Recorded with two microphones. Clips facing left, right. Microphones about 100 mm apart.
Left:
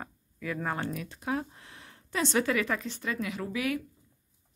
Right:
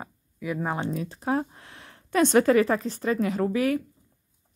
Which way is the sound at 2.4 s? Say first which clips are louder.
Right 9 dB; 35° right (ahead or behind).